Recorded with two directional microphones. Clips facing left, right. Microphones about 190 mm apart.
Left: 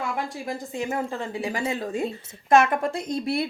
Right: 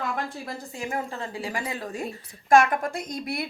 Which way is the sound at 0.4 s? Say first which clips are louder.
Left 5 dB; 20° left (ahead or behind).